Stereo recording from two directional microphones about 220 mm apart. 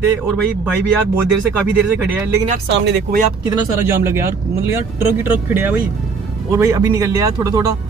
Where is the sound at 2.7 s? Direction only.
55° right (ahead or behind).